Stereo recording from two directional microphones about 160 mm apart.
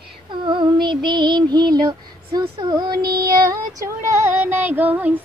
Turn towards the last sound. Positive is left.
turn(degrees=-10)  # may be behind; listen again after turning